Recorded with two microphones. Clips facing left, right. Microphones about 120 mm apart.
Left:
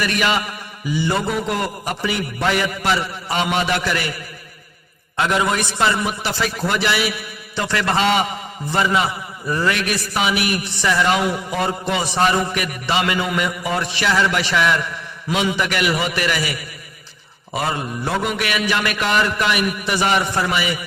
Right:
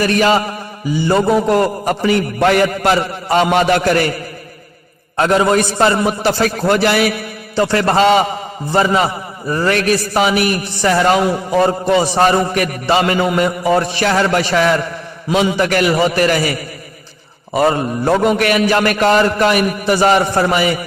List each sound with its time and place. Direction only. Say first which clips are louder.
0.0 s a man's voice: right 7 dB; 40° right (ahead or behind)